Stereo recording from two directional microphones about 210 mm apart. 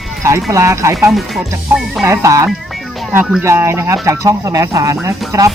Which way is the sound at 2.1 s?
15° right (ahead or behind).